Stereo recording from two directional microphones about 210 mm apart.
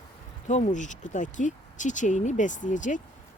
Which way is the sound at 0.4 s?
35° left (ahead or behind).